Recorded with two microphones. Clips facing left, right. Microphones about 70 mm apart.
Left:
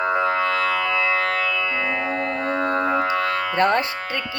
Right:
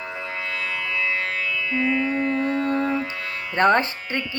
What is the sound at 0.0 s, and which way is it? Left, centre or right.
Music, left.